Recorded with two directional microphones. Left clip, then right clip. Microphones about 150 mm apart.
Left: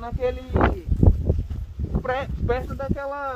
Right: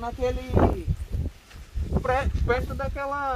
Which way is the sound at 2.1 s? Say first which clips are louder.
Right 1 dB; 65° right (ahead or behind).